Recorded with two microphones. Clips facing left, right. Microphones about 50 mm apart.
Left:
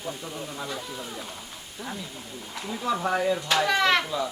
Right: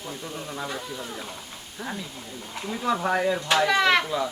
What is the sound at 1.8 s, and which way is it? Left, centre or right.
Speech, right.